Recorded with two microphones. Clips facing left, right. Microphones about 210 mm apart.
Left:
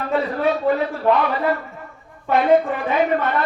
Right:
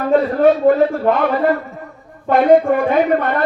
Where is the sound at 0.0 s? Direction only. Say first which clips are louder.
Right 8 dB; 50° right (ahead or behind).